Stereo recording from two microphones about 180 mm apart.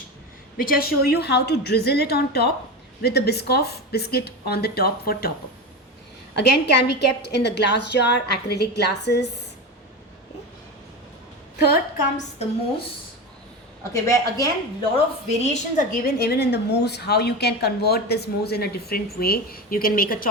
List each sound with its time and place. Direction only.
0.5 s a woman's voice: 55° left (ahead or behind)
6.3 s a woman's voice: 70° left (ahead or behind)
11.6 s a woman's voice: 60° left (ahead or behind)
13.9 s speech: 20° left (ahead or behind)
14.9 s a woman's voice: 40° left (ahead or behind)